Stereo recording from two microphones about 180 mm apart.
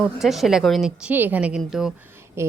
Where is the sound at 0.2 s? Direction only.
Centre (ahead or behind).